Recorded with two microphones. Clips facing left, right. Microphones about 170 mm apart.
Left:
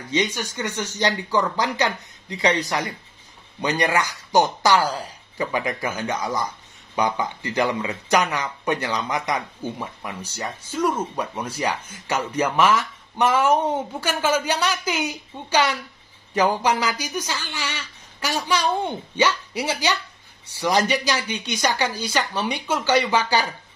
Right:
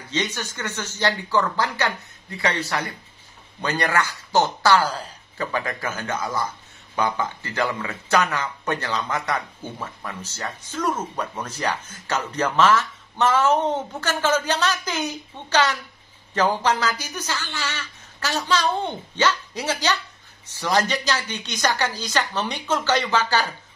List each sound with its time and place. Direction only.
0.1 s speech: 15° left (ahead or behind)